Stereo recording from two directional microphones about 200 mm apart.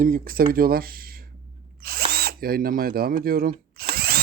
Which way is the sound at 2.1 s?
50° right (ahead or behind).